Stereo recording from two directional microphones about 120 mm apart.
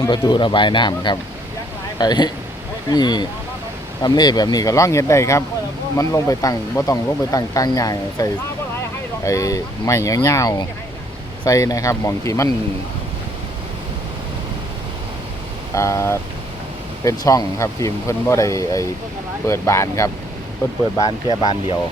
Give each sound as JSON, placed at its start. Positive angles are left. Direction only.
{"t": 0.0, "sound": "speech", "side_deg": 35}
{"t": 15.7, "sound": "speech", "side_deg": 25}
{"t": 21.0, "sound": "speech", "side_deg": 35}